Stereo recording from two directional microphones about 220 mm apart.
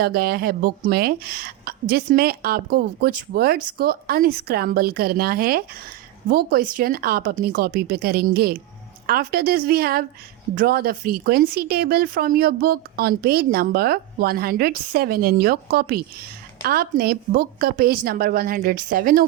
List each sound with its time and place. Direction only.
0.0 s a woman's voice: 45° right (ahead or behind)